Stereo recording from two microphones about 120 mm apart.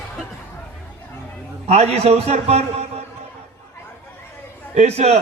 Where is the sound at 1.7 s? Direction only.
60° right (ahead or behind).